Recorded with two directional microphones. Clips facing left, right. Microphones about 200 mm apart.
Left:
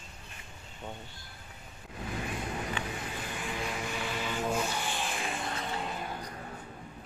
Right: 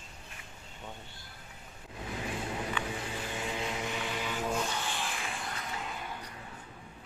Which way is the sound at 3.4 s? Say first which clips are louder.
Even; 20° right (ahead or behind).